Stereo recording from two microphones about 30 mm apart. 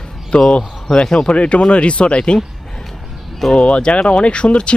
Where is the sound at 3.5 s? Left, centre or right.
Left.